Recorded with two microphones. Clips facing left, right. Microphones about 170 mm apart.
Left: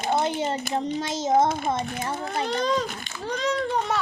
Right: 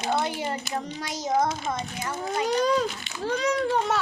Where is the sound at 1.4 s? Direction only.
55° left (ahead or behind).